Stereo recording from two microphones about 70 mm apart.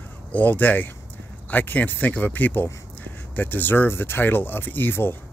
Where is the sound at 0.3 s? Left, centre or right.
Left.